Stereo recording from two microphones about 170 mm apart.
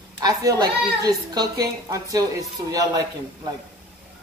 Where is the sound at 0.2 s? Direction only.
20° right (ahead or behind).